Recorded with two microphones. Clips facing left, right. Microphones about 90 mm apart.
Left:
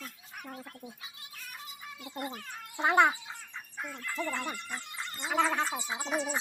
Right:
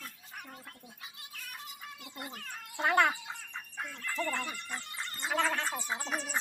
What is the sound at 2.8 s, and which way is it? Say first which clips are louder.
A child's voice: left 3 dB; 15° left (ahead or behind).